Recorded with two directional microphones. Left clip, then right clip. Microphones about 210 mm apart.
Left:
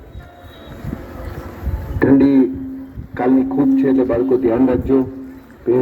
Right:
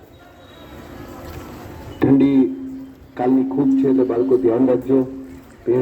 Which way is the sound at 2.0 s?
30° left (ahead or behind).